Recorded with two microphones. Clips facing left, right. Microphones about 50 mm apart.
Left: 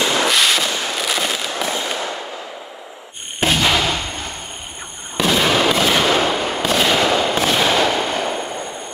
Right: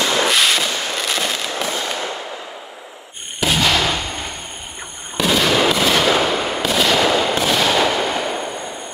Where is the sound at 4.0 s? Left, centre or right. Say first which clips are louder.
Right 1 dB; centre.